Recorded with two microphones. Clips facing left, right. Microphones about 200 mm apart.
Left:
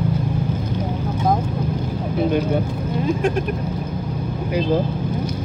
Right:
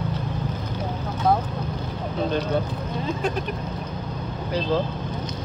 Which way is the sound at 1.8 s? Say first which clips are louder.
Left 5 dB; 10° left (ahead or behind).